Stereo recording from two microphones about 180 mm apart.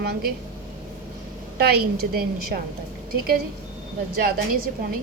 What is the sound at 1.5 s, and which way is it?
A woman's voice, 60° right (ahead or behind).